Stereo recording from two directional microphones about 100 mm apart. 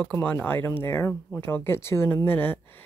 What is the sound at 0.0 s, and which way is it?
Speech, 15° left (ahead or behind).